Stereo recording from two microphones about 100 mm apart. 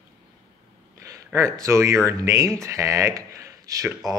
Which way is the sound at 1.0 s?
30° right (ahead or behind).